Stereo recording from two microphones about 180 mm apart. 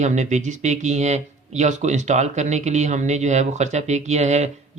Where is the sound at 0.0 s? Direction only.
40° right (ahead or behind).